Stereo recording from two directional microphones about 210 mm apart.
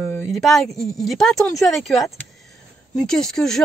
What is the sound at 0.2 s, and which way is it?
Speech, centre (ahead or behind).